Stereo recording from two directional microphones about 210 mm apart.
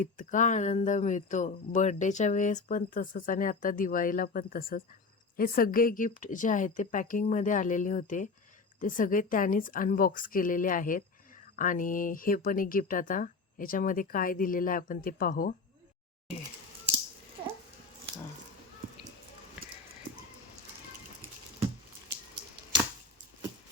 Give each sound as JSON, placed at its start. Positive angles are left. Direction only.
{"t": 0.0, "sound": "speech", "side_deg": 40}